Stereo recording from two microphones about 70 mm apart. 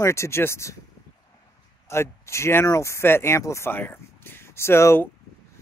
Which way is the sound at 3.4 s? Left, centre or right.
Left.